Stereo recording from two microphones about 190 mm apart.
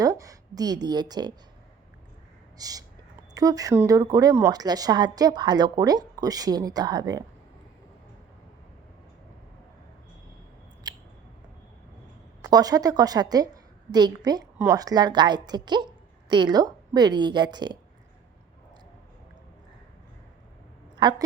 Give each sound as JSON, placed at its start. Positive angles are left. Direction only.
{"t": 0.0, "sound": "a woman's voice", "side_deg": -20}
{"t": 2.6, "sound": "speech", "side_deg": -20}
{"t": 10.8, "sound": "scissors", "side_deg": -20}
{"t": 12.4, "sound": "speech", "side_deg": -20}
{"t": 20.9, "sound": "a woman's voice", "side_deg": -20}